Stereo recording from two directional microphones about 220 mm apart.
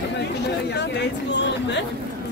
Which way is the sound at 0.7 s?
50° left (ahead or behind).